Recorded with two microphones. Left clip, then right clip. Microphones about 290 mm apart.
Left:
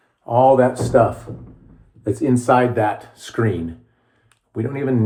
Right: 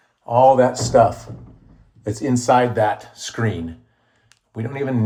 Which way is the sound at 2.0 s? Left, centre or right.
Right.